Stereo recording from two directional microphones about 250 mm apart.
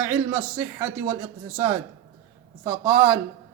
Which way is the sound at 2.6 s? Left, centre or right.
Centre.